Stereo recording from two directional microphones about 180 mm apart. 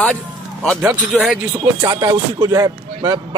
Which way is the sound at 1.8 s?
20° right (ahead or behind).